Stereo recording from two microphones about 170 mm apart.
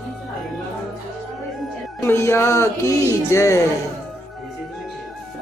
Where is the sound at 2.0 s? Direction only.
15° left (ahead or behind).